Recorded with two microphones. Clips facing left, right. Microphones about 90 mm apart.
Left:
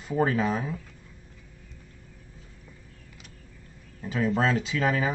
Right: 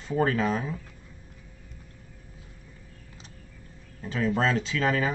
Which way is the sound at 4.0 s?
Centre (ahead or behind).